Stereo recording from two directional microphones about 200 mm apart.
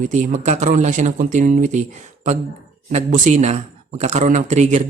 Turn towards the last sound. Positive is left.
turn(degrees=-35)  # may be behind; listen again after turning